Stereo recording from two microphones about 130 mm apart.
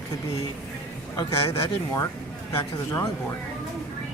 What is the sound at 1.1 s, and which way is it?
A woman's voice, 20° left (ahead or behind).